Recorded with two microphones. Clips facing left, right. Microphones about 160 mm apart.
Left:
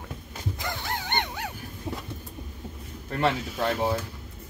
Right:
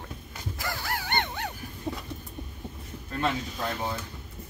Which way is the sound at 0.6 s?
20° left (ahead or behind).